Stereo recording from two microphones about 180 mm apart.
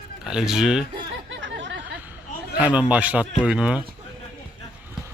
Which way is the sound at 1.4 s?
90° right.